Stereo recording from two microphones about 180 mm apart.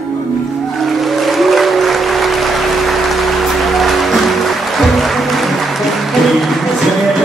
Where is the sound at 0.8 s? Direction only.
Centre (ahead or behind).